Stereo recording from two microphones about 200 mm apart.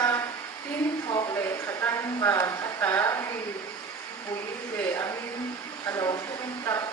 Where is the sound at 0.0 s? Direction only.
15° left (ahead or behind).